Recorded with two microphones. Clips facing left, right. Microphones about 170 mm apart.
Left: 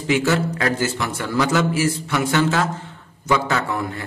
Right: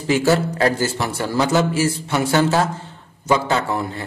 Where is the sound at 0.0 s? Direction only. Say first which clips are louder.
Right 2 dB; 35° right (ahead or behind).